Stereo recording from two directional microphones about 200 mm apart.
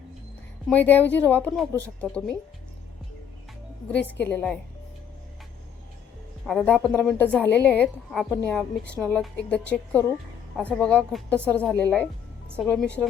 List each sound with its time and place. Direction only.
0.7 s a woman's voice: 10° left (ahead or behind)
3.8 s a woman's voice: 10° left (ahead or behind)
6.4 s a woman's voice: centre (ahead or behind)